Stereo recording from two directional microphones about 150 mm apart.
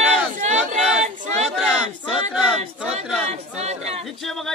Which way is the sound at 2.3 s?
5° right (ahead or behind).